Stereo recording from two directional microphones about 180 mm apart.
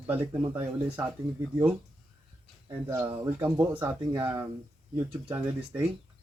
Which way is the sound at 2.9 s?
15° right (ahead or behind).